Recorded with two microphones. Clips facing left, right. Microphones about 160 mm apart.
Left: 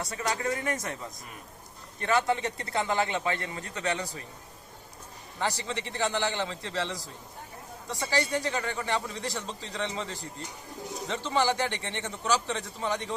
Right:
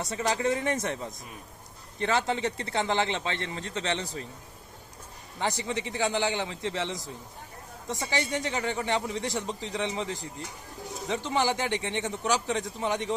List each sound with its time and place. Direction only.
0.1 s a man's voice: 25° right (ahead or behind)
2.0 s a man's voice: 25° right (ahead or behind)
5.4 s speech: 20° right (ahead or behind)